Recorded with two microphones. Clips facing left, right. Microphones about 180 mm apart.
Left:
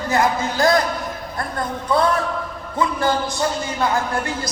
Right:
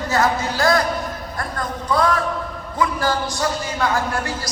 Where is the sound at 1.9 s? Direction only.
25° left (ahead or behind).